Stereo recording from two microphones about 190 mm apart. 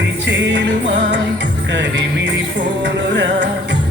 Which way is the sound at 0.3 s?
70° right (ahead or behind).